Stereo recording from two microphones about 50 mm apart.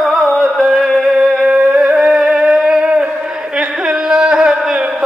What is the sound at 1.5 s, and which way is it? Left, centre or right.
Music, right.